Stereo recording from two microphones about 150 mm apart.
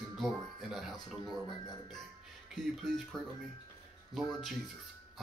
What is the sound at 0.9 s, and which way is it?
Speech, 30° left (ahead or behind).